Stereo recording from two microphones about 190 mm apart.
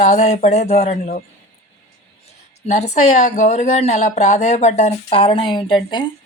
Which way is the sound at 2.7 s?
35° left (ahead or behind).